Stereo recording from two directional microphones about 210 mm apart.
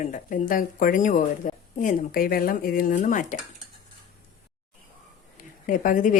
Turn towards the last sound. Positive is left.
turn(degrees=40)  # may be behind; listen again after turning